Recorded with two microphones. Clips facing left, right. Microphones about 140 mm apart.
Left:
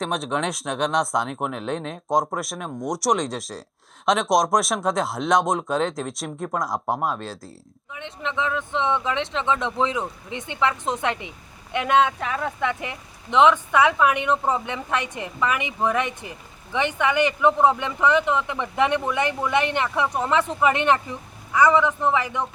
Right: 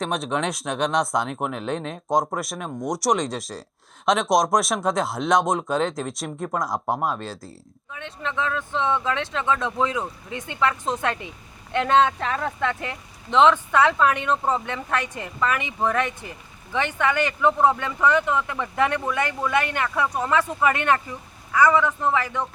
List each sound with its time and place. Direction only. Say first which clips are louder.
0.0 s speech: even; centre (ahead or behind)
7.9 s speech: left 1 dB; 20° left (ahead or behind)